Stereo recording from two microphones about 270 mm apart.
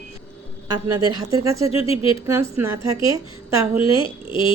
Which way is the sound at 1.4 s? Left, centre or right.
Centre.